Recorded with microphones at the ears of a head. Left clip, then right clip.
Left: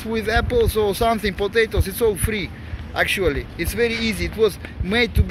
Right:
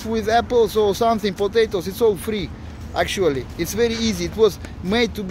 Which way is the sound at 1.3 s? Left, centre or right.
Centre.